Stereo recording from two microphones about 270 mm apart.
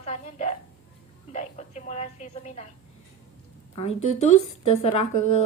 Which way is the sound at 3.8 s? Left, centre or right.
Left.